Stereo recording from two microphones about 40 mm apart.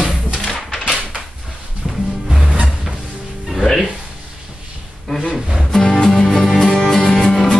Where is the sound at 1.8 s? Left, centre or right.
Centre.